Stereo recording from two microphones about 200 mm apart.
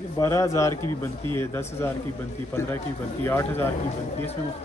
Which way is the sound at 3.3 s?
10° left (ahead or behind).